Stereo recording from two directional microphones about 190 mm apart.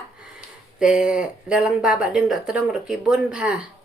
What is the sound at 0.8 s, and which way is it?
Speech, 5° right (ahead or behind).